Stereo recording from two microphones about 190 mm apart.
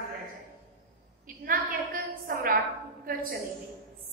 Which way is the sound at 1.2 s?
50° right (ahead or behind).